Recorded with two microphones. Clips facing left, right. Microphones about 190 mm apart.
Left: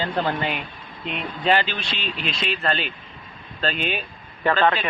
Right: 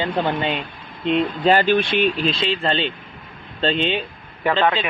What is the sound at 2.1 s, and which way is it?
Speech, 30° right (ahead or behind).